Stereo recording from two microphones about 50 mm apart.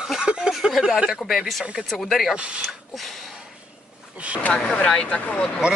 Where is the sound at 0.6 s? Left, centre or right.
Centre.